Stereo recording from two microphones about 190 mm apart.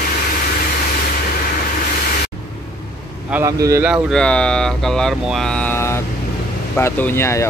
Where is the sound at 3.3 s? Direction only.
15° right (ahead or behind).